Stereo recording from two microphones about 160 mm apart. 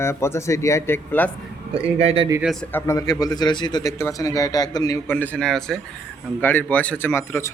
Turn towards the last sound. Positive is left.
turn(degrees=15)  # may be behind; listen again after turning